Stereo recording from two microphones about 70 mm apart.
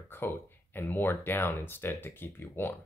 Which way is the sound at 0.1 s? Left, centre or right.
Left.